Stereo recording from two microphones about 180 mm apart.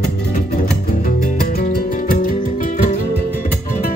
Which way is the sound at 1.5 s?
55° left (ahead or behind).